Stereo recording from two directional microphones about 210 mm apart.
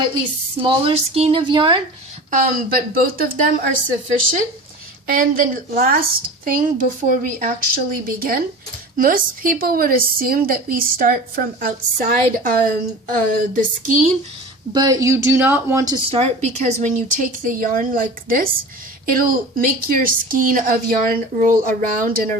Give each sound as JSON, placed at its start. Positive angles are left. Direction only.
{"t": 0.6, "sound": "speech", "side_deg": -25}
{"t": 2.3, "sound": "a woman's voice", "side_deg": -45}
{"t": 5.0, "sound": "a woman's voice", "side_deg": -40}
{"t": 14.7, "sound": "speech", "side_deg": -20}
{"t": 16.1, "sound": "a woman's voice", "side_deg": -30}